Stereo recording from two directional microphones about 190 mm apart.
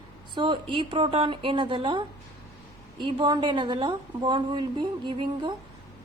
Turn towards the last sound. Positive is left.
turn(degrees=-25)  # may be behind; listen again after turning